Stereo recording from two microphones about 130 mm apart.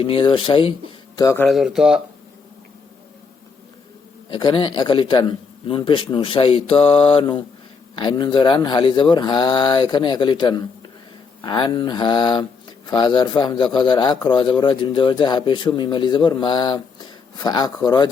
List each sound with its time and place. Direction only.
0.0 s a man's voice: 40° left (ahead or behind)
1.1 s speech: 30° left (ahead or behind)
1.5 s speech: centre (ahead or behind)
4.3 s a man's voice: 40° left (ahead or behind)